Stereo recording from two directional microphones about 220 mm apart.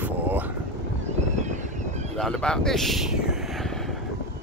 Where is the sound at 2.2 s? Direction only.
5° left (ahead or behind).